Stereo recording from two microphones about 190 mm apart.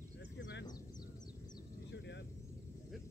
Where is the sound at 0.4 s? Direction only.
65° left (ahead or behind).